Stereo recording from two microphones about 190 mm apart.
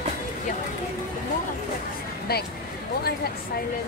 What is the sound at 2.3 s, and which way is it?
Vehicle, 55° left (ahead or behind).